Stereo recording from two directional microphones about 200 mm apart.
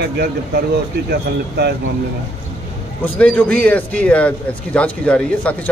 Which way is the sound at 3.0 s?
5° left (ahead or behind).